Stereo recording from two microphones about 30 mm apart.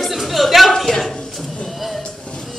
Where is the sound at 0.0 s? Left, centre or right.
Centre.